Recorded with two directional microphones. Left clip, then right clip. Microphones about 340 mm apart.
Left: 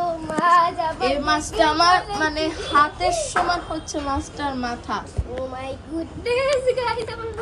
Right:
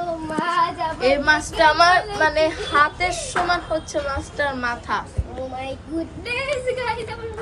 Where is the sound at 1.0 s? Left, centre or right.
Centre.